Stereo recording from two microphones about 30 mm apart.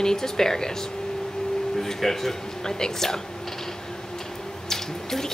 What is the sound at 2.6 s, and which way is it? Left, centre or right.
Speech, left.